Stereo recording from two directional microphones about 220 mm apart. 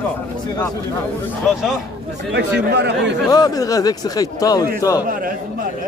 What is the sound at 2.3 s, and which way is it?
Speech, 50° right (ahead or behind).